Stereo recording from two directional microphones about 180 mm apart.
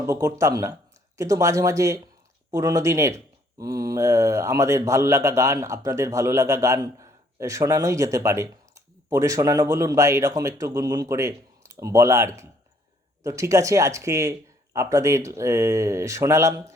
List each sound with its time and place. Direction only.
0.0 s speech: 15° right (ahead or behind)